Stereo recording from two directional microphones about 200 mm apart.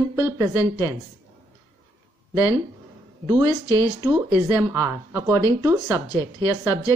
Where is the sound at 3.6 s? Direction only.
15° left (ahead or behind).